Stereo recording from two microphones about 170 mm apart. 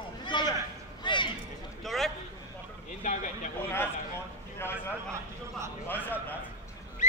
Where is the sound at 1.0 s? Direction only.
25° left (ahead or behind).